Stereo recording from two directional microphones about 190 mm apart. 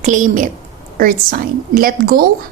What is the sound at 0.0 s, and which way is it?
A woman's voice, 40° right (ahead or behind).